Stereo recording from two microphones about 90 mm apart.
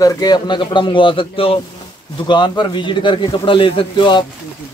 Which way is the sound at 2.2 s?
55° left (ahead or behind).